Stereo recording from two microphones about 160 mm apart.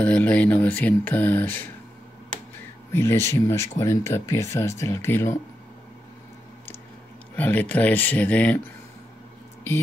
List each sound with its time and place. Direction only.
0.0 s speech: 10° left (ahead or behind)
2.9 s speech: 15° left (ahead or behind)
7.3 s speech: 10° left (ahead or behind)